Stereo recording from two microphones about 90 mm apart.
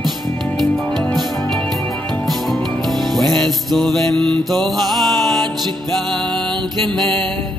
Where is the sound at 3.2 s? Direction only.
5° left (ahead or behind).